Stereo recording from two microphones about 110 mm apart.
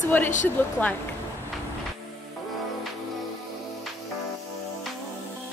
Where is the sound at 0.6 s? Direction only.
15° left (ahead or behind).